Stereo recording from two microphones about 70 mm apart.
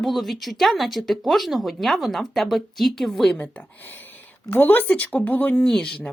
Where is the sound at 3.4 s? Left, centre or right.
Left.